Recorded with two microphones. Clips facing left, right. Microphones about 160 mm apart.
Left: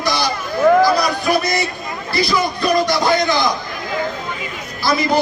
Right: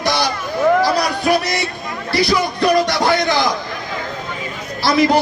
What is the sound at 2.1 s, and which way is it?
Speech, 75° right (ahead or behind).